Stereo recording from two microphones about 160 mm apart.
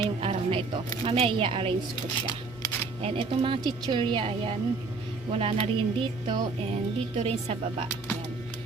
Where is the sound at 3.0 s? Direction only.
35° right (ahead or behind).